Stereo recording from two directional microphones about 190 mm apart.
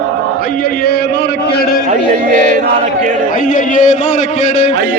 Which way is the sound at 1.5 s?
50° left (ahead or behind).